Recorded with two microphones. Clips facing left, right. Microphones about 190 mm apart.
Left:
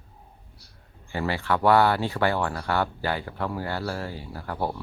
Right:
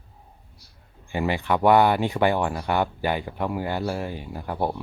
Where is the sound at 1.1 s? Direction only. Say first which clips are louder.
Right 2 dB; 15° right (ahead or behind).